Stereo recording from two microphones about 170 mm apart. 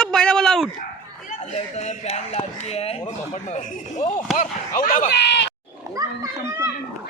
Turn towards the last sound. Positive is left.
turn(degrees=-20)  # may be behind; listen again after turning